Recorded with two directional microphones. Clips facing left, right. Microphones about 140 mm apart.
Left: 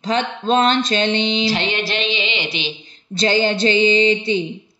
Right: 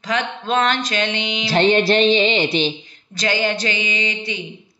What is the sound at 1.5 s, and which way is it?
Speech, 45° right (ahead or behind).